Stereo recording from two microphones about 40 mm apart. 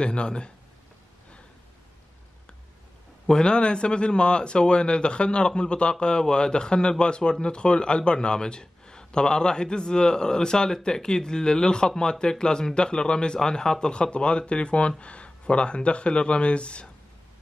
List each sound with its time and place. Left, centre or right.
0.0 s a man's voice: left
3.3 s a man's voice: left